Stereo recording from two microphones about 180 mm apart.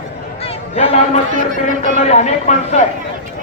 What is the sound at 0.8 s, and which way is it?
A man's voice, 35° left (ahead or behind).